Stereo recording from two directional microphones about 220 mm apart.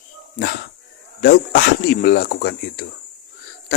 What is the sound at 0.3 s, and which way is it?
Speech, 45° left (ahead or behind).